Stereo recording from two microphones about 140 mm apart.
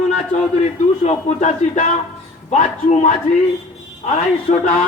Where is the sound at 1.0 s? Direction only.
55° left (ahead or behind).